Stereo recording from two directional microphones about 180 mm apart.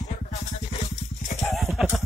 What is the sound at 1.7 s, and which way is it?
Music, centre (ahead or behind).